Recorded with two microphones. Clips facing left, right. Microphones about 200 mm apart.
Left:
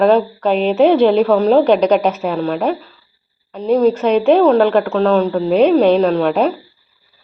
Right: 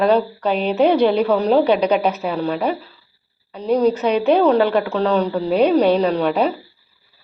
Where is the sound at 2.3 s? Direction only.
50° left (ahead or behind).